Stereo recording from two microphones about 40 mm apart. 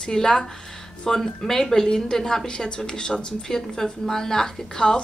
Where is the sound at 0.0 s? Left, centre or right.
Centre.